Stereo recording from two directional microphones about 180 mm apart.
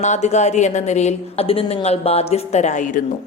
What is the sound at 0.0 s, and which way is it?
A woman's voice, 40° left (ahead or behind).